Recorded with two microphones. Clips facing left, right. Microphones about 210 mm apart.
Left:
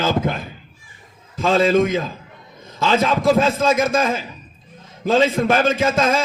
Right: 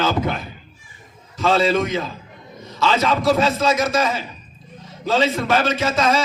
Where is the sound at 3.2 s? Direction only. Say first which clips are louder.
Left 1 dB; 50° left (ahead or behind).